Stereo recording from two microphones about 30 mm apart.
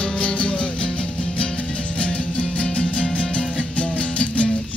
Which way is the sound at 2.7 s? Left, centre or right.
Left.